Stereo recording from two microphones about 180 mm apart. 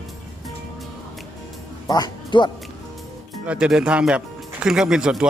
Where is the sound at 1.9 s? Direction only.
25° left (ahead or behind).